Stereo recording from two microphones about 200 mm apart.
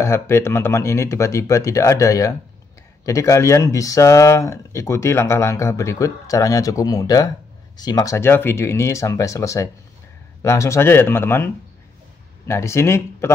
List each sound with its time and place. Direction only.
0.0 s speech: 15° left (ahead or behind)